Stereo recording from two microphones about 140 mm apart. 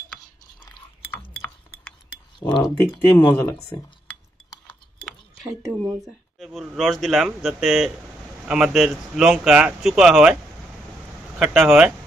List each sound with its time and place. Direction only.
1.1 s chink: 10° left (ahead or behind)
2.4 s speech: 30° left (ahead or behind)
3.3 s speech: 15° left (ahead or behind)
5.7 s speech: 5° right (ahead or behind)
11.3 s speech: 5° right (ahead or behind)